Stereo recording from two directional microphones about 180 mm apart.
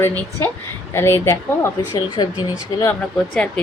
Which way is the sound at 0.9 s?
15° left (ahead or behind).